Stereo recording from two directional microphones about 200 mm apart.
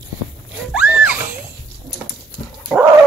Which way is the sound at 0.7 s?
5° right (ahead or behind).